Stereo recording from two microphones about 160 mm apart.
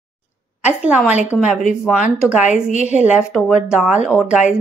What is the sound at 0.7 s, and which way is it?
Speech, 10° right (ahead or behind).